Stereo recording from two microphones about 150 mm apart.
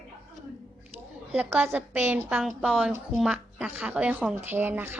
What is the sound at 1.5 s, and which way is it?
A woman's voice, 10° right (ahead or behind).